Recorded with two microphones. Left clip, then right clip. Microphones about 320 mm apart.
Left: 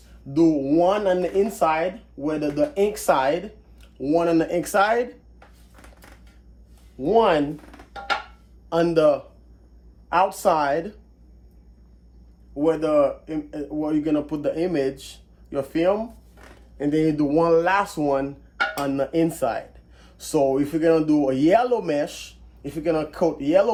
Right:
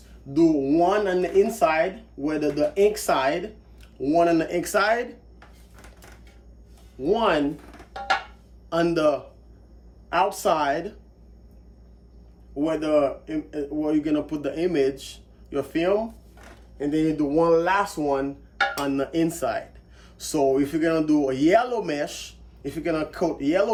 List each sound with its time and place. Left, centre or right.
0.3 s speech: centre
7.0 s speech: centre
8.7 s speech: centre
12.5 s speech: centre